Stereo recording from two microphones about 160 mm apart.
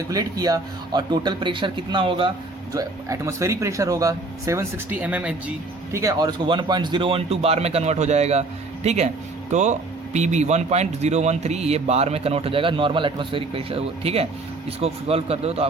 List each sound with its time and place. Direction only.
0.1 s speech: 25° right (ahead or behind)
2.7 s speech: 20° right (ahead or behind)
6.0 s speech: 20° right (ahead or behind); by 15.6 s 40° right (ahead or behind)